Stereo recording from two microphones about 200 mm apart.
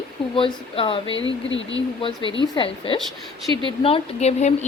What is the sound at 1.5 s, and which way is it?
Speech, 70° left (ahead or behind).